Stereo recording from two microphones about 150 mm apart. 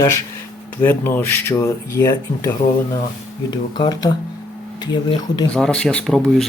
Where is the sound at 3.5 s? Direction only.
25° left (ahead or behind).